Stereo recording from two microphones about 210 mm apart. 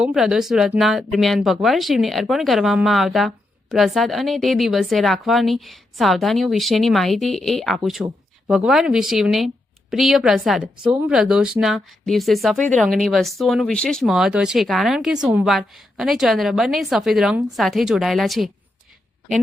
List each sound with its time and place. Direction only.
0.0 s speech: 5° right (ahead or behind)